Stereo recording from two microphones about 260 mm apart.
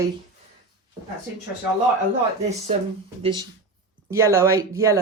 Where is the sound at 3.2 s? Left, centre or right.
Centre.